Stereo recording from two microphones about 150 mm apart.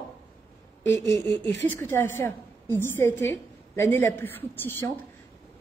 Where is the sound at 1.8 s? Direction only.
15° left (ahead or behind).